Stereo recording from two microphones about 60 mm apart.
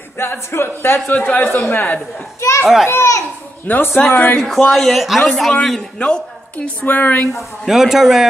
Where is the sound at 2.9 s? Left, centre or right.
Left.